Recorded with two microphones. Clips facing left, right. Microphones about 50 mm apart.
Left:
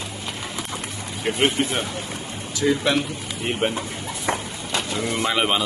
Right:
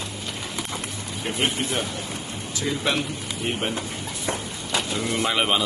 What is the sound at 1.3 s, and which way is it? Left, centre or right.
Speech, centre.